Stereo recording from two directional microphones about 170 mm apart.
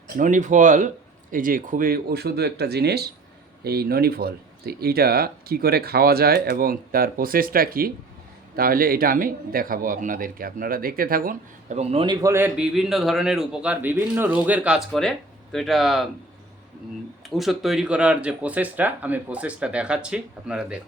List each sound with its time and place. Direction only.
0.2 s speech: 50° right (ahead or behind)
11.8 s a man's voice: 40° right (ahead or behind)
12.0 s speech: 20° right (ahead or behind)
12.7 s speech: centre (ahead or behind)
17.2 s speech: centre (ahead or behind)